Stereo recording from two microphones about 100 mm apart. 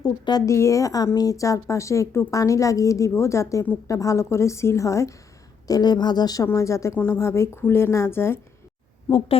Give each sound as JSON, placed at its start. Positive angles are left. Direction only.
{"t": 0.0, "sound": "a woman's voice", "side_deg": 40}
{"t": 0.5, "sound": "a woman's voice", "side_deg": 30}
{"t": 9.0, "sound": "speech", "side_deg": 65}